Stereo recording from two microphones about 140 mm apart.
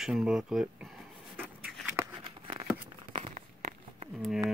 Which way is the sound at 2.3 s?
35° right (ahead or behind).